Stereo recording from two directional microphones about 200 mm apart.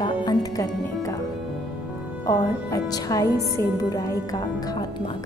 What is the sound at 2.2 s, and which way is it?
Speech, 15° left (ahead or behind).